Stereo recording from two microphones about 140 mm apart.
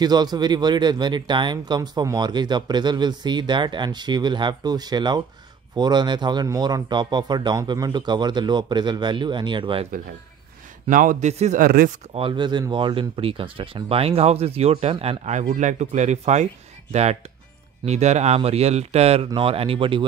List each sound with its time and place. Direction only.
0.0 s speech: 30° right (ahead or behind)
10.9 s a man's voice: 70° right (ahead or behind); by 11.6 s 55° right (ahead or behind)
11.6 s speech: 90° right
12.2 s speech: 35° right (ahead or behind)